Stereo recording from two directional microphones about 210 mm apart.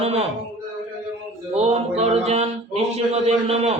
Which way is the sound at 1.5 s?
30° right (ahead or behind).